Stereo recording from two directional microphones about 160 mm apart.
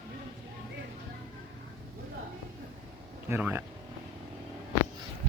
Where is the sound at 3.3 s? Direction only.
10° right (ahead or behind).